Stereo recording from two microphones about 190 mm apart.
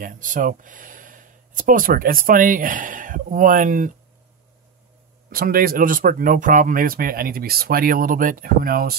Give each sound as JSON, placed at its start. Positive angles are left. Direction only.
{"t": 0.0, "sound": "speech", "side_deg": -45}
{"t": 5.3, "sound": "speech", "side_deg": -50}